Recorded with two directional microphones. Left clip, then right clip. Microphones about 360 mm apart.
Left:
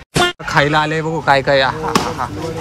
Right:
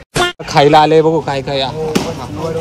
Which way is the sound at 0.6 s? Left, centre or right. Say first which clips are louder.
Right 9 dB; centre.